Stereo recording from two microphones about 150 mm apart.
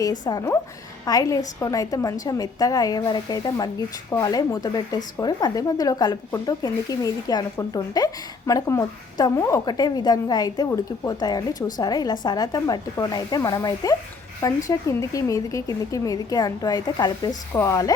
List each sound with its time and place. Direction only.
0.0 s a woman's voice: 25° left (ahead or behind)